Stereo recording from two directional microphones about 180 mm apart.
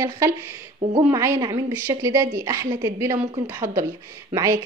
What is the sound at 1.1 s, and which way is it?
A woman's voice, 15° right (ahead or behind).